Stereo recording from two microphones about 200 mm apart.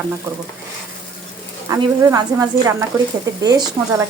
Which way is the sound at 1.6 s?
15° right (ahead or behind).